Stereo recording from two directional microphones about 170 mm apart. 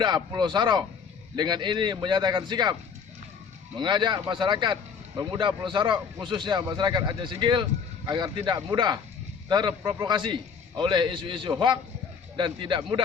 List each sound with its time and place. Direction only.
0.0 s a man's voice: 25° right (ahead or behind)
3.8 s a man's voice: 25° right (ahead or behind)